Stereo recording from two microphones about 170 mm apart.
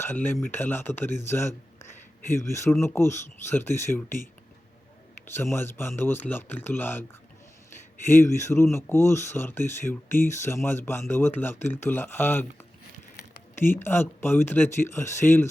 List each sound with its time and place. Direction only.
0.0 s speech: 10° left (ahead or behind)
5.2 s speech: 15° left (ahead or behind)
8.2 s speech: 15° left (ahead or behind)
13.6 s speech: 15° left (ahead or behind)